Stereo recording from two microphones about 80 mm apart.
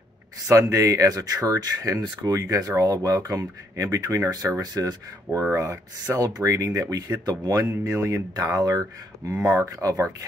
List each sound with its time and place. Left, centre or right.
0.5 s speech: right
4.3 s speech: right
5.3 s speech: right
5.6 s speech: right